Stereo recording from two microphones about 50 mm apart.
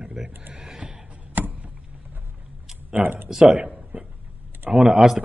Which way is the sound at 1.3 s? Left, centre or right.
Right.